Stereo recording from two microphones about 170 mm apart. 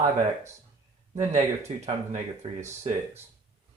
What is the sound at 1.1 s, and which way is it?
Speech, 40° right (ahead or behind).